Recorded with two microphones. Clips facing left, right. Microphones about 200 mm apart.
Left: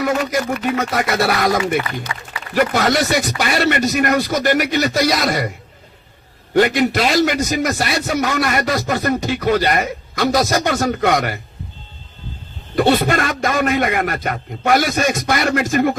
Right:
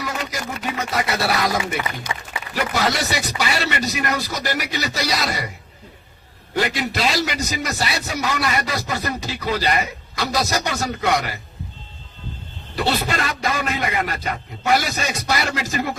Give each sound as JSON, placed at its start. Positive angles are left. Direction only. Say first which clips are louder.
{"t": 0.0, "sound": "a man's voice", "louder": "left 9 dB", "side_deg": 50}
{"t": 2.1, "sound": "speech", "louder": "right 1 dB", "side_deg": -20}
{"t": 2.6, "sound": "a man's voice", "louder": "left 6 dB", "side_deg": 50}
{"t": 12.7, "sound": "a man's voice", "louder": "left 7 dB", "side_deg": 55}